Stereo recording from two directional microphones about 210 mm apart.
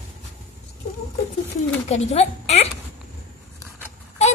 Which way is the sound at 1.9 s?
30° left (ahead or behind).